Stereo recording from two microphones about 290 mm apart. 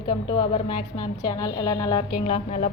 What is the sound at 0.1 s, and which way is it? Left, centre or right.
A woman's voice, centre.